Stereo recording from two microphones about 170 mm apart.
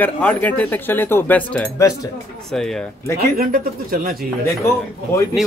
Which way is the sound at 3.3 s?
55° right (ahead or behind).